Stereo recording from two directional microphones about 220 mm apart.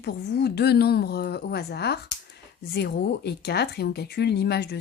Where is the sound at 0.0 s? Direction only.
50° left (ahead or behind).